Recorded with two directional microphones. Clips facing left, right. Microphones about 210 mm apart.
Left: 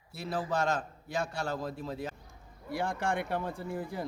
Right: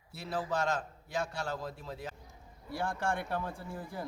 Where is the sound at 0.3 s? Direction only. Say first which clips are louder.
Left 2 dB; 45° left (ahead or behind).